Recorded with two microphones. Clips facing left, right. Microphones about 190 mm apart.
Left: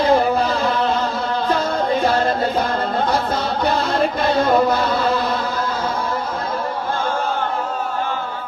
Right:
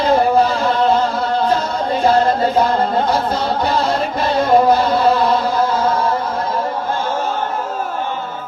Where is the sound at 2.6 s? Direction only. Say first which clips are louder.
Right 5 dB; 55° left (ahead or behind).